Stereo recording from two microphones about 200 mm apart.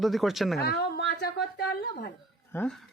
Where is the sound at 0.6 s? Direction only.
55° left (ahead or behind).